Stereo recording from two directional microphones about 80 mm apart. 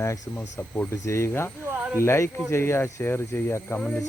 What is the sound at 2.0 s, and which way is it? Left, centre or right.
Speech, left.